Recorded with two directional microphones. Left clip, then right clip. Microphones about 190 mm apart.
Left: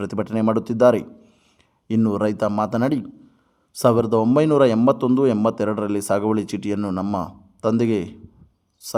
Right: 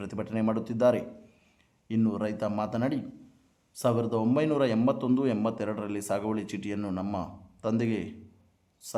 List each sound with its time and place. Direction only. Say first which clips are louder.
0.0 s a man's voice: left 9 dB; 35° left (ahead or behind)